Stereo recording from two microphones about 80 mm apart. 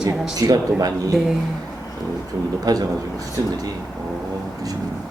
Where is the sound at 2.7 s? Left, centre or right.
Right.